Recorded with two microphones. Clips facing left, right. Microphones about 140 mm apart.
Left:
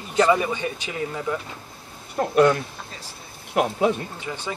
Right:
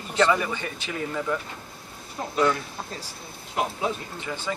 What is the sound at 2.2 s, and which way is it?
Speech, 65° left (ahead or behind).